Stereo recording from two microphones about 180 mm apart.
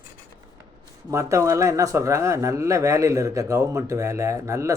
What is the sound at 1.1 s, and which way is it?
Speech, 15° right (ahead or behind).